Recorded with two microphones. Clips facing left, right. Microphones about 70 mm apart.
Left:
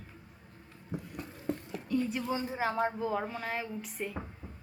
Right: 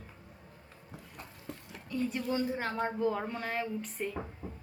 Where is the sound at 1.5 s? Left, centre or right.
Left.